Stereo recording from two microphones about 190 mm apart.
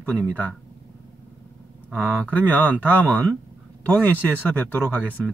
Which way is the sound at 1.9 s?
10° left (ahead or behind).